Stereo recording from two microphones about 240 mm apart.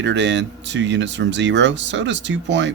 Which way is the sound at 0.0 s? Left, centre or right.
Right.